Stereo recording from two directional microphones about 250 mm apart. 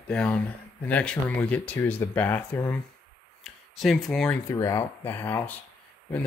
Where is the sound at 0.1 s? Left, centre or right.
Centre.